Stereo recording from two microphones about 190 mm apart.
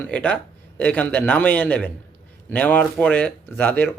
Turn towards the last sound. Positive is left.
turn(degrees=10)  # may be behind; listen again after turning